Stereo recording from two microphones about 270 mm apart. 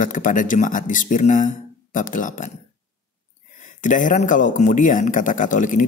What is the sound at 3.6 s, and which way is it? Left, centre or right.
Speech, left.